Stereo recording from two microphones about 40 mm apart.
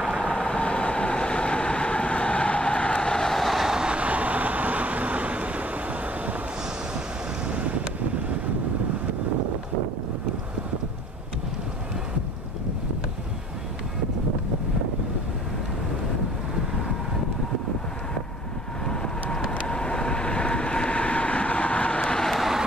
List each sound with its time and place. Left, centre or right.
0.2 s vehicle: left
3.3 s vehicle: centre
3.6 s vehicle: centre
3.9 s vehicle: right
7.4 s vehicle: right
19.7 s vehicle: left
22.3 s vehicle: centre